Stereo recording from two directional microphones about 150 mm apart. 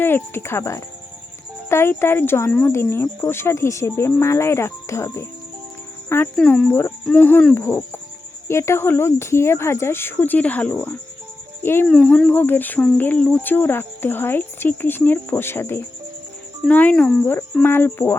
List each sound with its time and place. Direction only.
0.0 s speech: 15° left (ahead or behind)
6.3 s speech: 5° left (ahead or behind)